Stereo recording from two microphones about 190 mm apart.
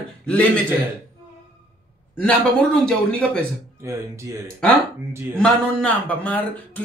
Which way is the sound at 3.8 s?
15° right (ahead or behind).